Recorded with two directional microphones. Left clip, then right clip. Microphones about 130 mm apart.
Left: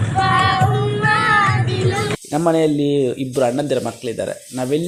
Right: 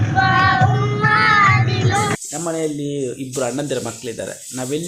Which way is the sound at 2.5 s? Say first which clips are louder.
Left 7 dB; 50° left (ahead or behind).